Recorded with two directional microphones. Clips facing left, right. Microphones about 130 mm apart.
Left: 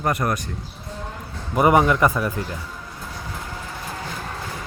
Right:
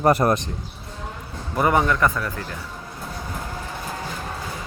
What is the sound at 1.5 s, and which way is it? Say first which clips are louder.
Speech: left 3 dB; 15° left (ahead or behind).